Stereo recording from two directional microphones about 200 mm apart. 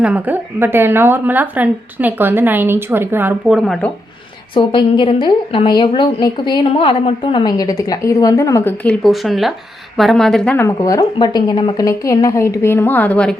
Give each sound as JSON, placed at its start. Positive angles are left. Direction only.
{"t": 0.0, "sound": "a woman's voice", "side_deg": -10}
{"t": 4.5, "sound": "a woman's voice", "side_deg": 25}